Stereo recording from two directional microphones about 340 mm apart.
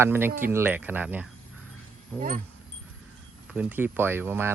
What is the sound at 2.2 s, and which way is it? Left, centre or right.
Speech, right.